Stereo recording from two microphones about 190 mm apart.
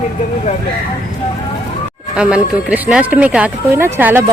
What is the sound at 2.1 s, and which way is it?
A woman's voice, 5° right (ahead or behind).